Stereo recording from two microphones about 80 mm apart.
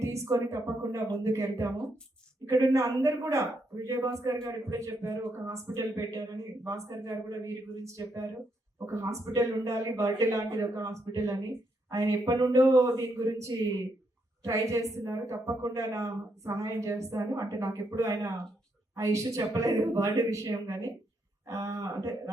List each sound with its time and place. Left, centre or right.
0.0 s a woman's voice: right